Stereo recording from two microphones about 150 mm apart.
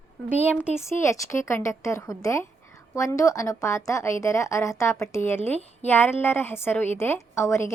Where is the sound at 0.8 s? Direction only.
20° left (ahead or behind).